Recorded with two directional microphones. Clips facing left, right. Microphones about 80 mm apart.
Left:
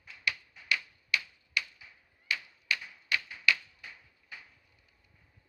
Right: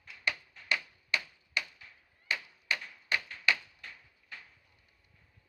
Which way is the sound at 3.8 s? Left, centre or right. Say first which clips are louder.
Even; centre.